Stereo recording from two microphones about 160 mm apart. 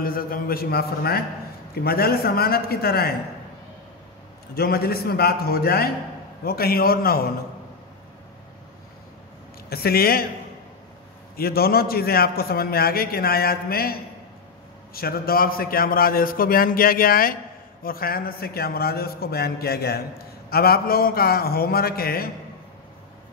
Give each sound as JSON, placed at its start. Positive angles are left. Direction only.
{"t": 0.0, "sound": "a man's voice", "side_deg": 65}
{"t": 4.6, "sound": "a man's voice", "side_deg": 75}
{"t": 9.7, "sound": "a man's voice", "side_deg": 75}
{"t": 11.3, "sound": "a man's voice", "side_deg": 70}
{"t": 15.0, "sound": "a man's voice", "side_deg": 70}